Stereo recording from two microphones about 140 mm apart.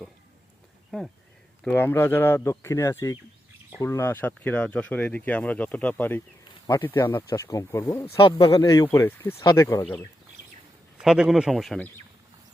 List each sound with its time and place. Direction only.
0.9 s speech: centre (ahead or behind)
1.6 s speech: 15° left (ahead or behind)
8.2 s a man's voice: 40° left (ahead or behind)
8.5 s speech: 25° left (ahead or behind)
9.0 s speech: 15° left (ahead or behind)
9.4 s speech: 25° left (ahead or behind)
11.0 s speech: 5° right (ahead or behind)